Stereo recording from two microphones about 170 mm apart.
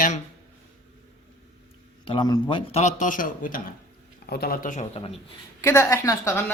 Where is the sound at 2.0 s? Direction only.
25° left (ahead or behind); by 4.9 s 50° left (ahead or behind).